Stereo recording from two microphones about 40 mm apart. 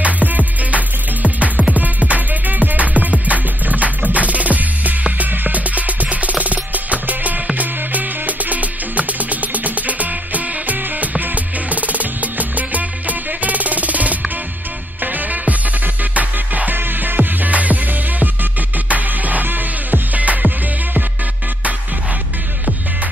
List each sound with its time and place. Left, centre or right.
0.0 s music: right
16.7 s music: right